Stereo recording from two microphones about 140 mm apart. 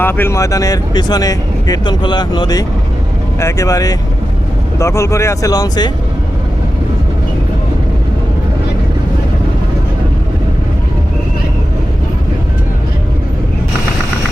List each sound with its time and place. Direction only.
0.0 s speech: 15° left (ahead or behind)